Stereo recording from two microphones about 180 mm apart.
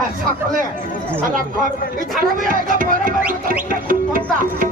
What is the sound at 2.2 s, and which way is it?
Speech, 50° right (ahead or behind).